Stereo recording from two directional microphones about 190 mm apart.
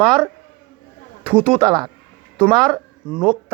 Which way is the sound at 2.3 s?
5° left (ahead or behind).